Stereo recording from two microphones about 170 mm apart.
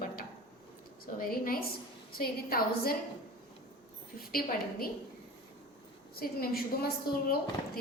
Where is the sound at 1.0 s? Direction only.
60° left (ahead or behind).